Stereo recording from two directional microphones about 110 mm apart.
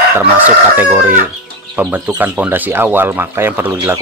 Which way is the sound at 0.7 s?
15° right (ahead or behind).